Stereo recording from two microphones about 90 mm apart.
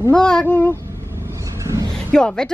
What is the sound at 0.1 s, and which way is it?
Speech, 10° left (ahead or behind).